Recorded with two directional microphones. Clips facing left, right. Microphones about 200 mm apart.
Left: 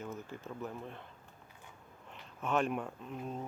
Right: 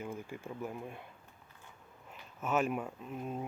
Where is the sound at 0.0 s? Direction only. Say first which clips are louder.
Right 1 dB; 10° right (ahead or behind).